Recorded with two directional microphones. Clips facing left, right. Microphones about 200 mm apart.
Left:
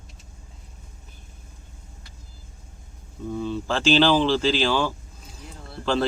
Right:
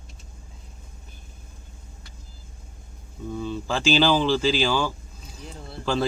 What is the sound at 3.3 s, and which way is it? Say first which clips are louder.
A man's voice: left 2 dB; centre (ahead or behind).